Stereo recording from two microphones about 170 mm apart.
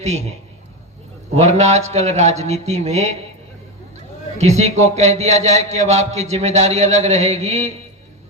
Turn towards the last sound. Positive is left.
turn(degrees=-40)  # may be behind; listen again after turning